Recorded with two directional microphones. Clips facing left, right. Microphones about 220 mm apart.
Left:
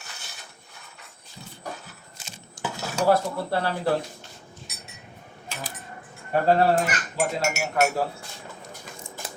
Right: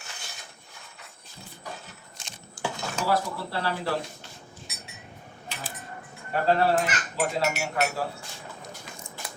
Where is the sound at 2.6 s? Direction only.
20° left (ahead or behind).